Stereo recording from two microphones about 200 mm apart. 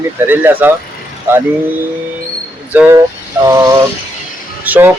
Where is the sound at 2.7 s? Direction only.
10° right (ahead or behind).